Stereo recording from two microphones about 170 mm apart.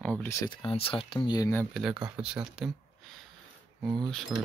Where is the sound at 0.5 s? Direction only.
30° left (ahead or behind).